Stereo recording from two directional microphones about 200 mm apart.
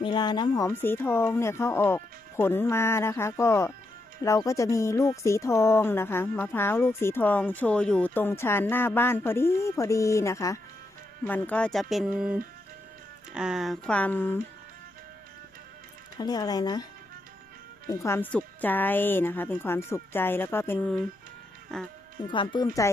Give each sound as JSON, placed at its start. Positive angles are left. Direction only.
{"t": 0.0, "sound": "speech", "side_deg": 20}
{"t": 16.1, "sound": "speech", "side_deg": 20}
{"t": 17.8, "sound": "speech", "side_deg": 15}
{"t": 22.3, "sound": "speech", "side_deg": 25}